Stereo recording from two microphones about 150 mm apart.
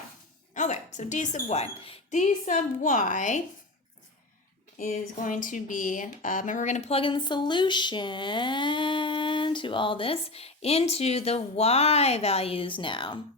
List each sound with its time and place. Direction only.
0.5 s a woman's voice: 55° left (ahead or behind)
4.8 s speech: 60° left (ahead or behind); by 13.1 s 35° left (ahead or behind)